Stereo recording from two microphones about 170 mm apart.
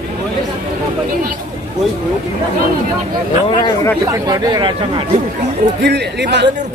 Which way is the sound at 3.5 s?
25° left (ahead or behind).